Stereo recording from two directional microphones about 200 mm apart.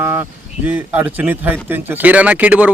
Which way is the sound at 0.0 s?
10° right (ahead or behind).